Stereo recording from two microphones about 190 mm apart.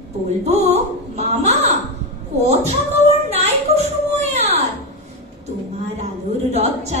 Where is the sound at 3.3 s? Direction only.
35° right (ahead or behind).